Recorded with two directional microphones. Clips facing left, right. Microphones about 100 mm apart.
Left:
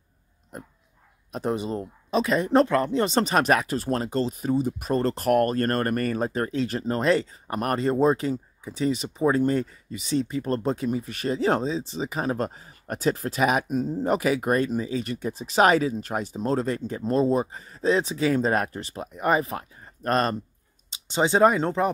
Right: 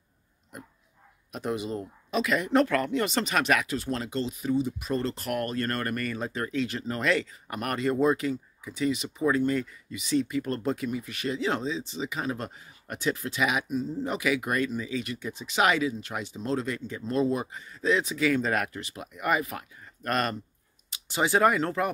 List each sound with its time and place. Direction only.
1.3 s speech: 35° left (ahead or behind)